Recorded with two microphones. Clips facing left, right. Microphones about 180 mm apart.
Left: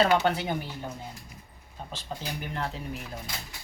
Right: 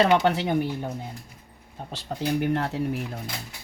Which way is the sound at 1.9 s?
65° right (ahead or behind).